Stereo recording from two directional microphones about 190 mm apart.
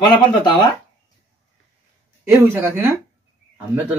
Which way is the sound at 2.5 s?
10° right (ahead or behind).